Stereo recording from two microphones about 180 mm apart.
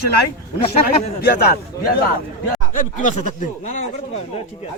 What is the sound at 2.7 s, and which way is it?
Speech, 45° left (ahead or behind).